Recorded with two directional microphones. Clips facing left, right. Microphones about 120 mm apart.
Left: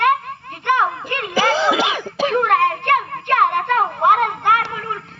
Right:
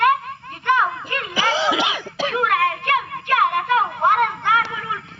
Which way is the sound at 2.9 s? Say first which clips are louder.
Left 3 dB; 55° left (ahead or behind).